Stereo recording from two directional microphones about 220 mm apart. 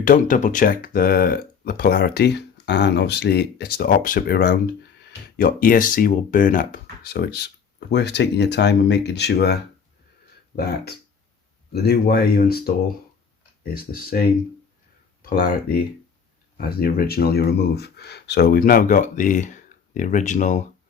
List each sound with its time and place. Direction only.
0.0 s speech: 35° left (ahead or behind)
13.7 s speech: 40° left (ahead or behind)
15.2 s speech: 40° left (ahead or behind)